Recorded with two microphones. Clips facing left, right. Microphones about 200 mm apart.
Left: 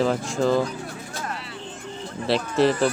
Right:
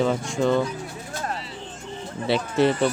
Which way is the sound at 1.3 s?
60° left (ahead or behind).